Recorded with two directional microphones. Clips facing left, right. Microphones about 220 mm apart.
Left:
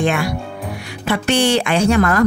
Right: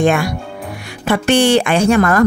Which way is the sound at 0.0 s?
45° right (ahead or behind).